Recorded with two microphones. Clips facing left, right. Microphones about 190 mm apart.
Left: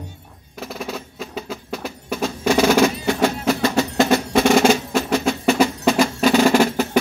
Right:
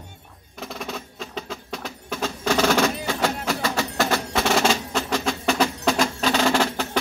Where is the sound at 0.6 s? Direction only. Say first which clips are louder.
Left 3 dB; 5° left (ahead or behind).